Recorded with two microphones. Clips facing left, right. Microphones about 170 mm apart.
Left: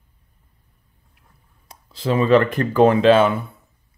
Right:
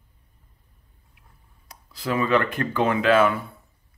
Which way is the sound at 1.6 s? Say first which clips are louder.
Left 5 dB; 25° left (ahead or behind).